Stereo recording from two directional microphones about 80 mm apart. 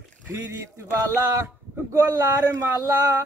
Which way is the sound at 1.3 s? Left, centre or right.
Right.